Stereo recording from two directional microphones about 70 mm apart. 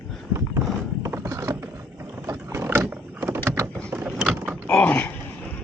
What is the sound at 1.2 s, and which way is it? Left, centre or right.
Mechanisms, right.